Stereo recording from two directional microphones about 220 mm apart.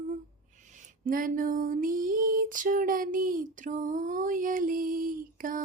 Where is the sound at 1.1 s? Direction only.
40° right (ahead or behind).